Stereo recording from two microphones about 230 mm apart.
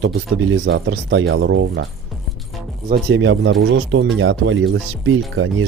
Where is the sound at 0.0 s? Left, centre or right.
Right.